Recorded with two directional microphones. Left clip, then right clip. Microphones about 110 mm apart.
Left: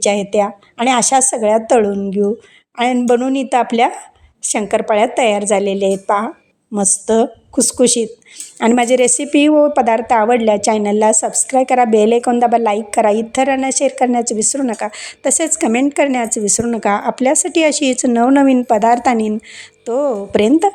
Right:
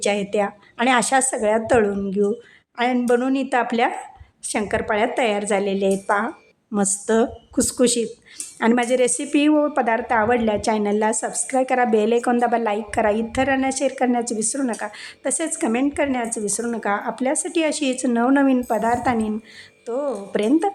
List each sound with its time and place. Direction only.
0.0 s a woman's voice: 30° left (ahead or behind)
2.7 s a woman's voice: 40° left (ahead or behind)
8.5 s a woman's voice: 50° left (ahead or behind); by 20.5 s 70° left (ahead or behind)